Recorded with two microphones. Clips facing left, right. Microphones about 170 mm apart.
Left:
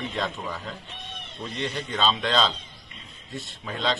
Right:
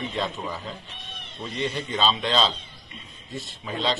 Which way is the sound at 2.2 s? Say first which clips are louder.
Even; 15° right (ahead or behind).